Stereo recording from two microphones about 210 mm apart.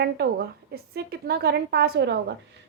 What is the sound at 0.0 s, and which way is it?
A woman's voice, 50° right (ahead or behind).